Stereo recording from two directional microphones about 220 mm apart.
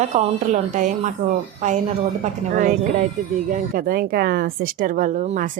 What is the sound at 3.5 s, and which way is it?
Speech, 40° right (ahead or behind).